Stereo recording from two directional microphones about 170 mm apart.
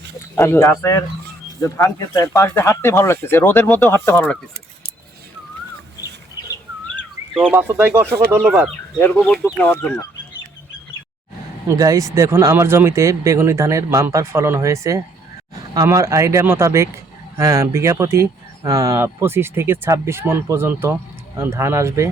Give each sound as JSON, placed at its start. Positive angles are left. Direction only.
{"t": 0.3, "sound": "speech", "side_deg": 15}
{"t": 7.5, "sound": "speech", "side_deg": -10}
{"t": 9.0, "sound": "speech", "side_deg": 10}
{"t": 11.7, "sound": "speech", "side_deg": -20}